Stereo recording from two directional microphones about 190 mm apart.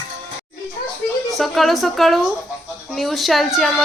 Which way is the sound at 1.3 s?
Centre (ahead or behind).